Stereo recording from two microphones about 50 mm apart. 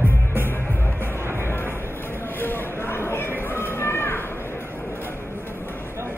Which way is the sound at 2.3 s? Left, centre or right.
Left.